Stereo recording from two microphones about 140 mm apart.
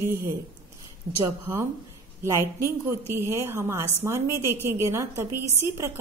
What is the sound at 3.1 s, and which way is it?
A woman's voice, 20° right (ahead or behind).